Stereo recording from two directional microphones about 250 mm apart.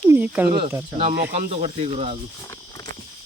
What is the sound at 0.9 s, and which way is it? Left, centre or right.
Speech, right.